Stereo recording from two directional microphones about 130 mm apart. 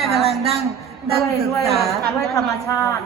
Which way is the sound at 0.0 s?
Centre (ahead or behind).